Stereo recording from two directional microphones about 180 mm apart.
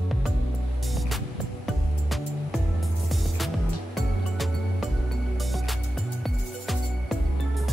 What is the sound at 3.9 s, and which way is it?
Music, centre (ahead or behind).